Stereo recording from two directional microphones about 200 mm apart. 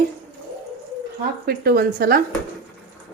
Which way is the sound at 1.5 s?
50° right (ahead or behind).